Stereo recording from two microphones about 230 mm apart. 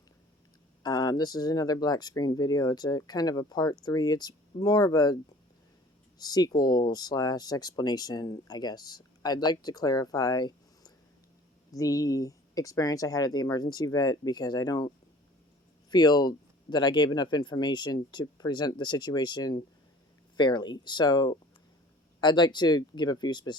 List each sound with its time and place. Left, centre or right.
0.8 s speech: centre
6.1 s speech: centre